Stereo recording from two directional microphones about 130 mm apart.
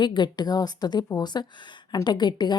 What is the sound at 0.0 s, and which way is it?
Speech, 35° left (ahead or behind).